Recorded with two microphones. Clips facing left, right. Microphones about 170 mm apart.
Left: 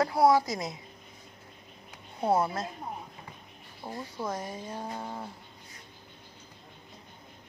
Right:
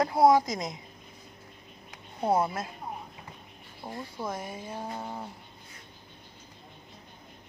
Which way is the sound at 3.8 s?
5° left (ahead or behind).